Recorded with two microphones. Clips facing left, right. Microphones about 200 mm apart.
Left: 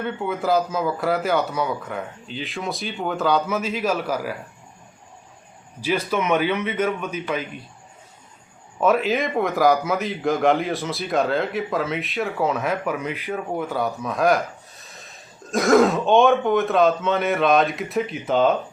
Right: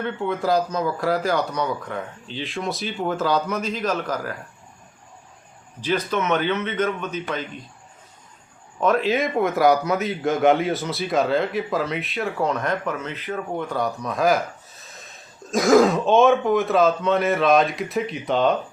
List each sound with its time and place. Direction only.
0.0 s a man's voice: 5° left (ahead or behind)
5.8 s speech: 10° left (ahead or behind)
8.8 s a man's voice: 5° left (ahead or behind)